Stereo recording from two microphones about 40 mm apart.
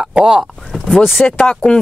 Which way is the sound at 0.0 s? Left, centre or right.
Right.